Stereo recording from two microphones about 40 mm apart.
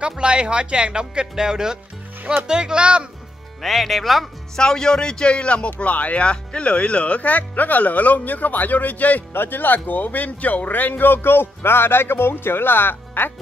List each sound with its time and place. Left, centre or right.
0.2 s speech: right
3.6 s speech: centre
4.6 s speech: centre; by 6.2 s left
6.2 s speech: left
9.3 s speech: left